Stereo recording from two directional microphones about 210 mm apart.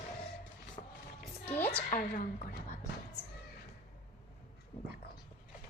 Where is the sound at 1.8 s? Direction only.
35° left (ahead or behind).